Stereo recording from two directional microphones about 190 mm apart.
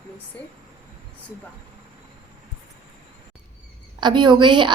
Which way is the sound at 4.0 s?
25° right (ahead or behind).